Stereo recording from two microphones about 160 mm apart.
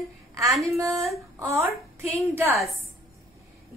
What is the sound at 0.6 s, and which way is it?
A woman's voice, 20° right (ahead or behind).